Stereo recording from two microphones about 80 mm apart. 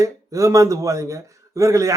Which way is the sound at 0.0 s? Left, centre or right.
Right.